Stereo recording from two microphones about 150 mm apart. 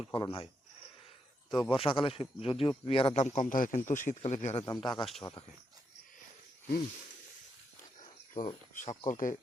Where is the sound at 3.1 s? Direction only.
50° left (ahead or behind).